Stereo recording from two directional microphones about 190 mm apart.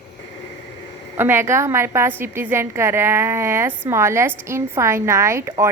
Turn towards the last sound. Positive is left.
turn(degrees=-15)  # may be behind; listen again after turning